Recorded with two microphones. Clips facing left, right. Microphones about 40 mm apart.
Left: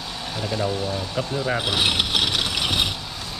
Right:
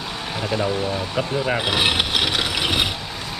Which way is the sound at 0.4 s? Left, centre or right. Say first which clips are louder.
Right 3 dB; right.